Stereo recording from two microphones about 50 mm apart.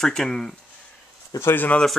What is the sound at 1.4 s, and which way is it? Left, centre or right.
Speech, left.